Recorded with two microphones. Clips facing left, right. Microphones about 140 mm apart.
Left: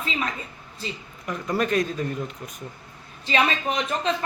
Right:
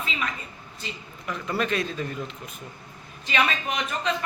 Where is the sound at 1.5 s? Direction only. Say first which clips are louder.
Left 4 dB; 45° left (ahead or behind).